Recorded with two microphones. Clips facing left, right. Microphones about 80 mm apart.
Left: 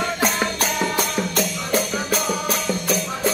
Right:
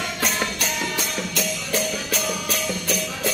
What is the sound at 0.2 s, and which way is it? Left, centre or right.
Music, left.